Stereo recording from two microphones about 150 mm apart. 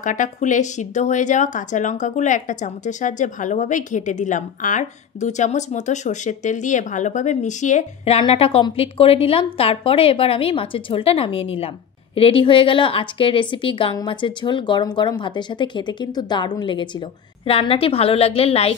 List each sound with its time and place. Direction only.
0.0 s a woman's voice: 55° left (ahead or behind); by 18.8 s 40° left (ahead or behind)